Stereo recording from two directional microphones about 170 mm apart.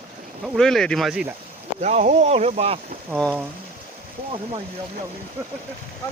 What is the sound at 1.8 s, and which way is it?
Speech, 45° right (ahead or behind).